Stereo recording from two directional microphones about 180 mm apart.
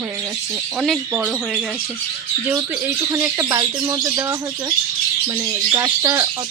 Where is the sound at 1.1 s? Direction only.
5° right (ahead or behind).